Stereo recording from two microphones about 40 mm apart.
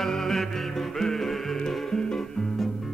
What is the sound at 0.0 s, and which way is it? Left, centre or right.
Music, centre.